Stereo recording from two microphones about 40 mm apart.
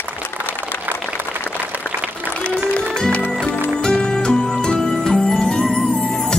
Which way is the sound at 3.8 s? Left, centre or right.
Left.